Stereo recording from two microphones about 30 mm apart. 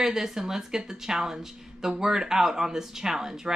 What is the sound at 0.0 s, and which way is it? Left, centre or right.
Speech, centre.